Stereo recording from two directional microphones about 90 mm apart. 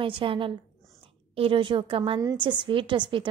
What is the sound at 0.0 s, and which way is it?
A woman's voice, 70° right (ahead or behind).